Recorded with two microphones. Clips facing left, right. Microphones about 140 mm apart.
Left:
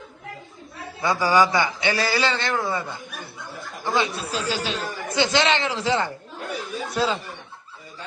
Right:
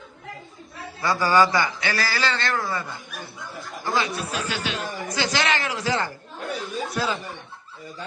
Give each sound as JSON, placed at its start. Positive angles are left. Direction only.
{"t": 1.0, "sound": "speech", "side_deg": 20}
{"t": 6.4, "sound": "a sound", "side_deg": 0}
{"t": 6.9, "sound": "speech", "side_deg": 30}